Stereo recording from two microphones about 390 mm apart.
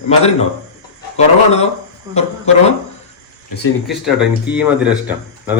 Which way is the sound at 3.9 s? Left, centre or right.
Centre.